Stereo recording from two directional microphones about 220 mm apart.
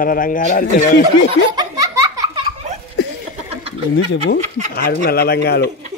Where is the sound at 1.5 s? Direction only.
15° right (ahead or behind).